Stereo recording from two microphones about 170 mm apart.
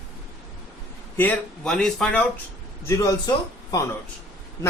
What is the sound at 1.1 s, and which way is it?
Speech, 10° left (ahead or behind).